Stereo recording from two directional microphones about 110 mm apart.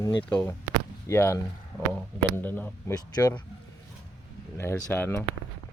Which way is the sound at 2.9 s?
35° left (ahead or behind).